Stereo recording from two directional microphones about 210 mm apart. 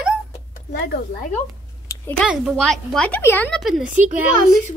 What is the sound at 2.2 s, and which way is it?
Speech, centre (ahead or behind).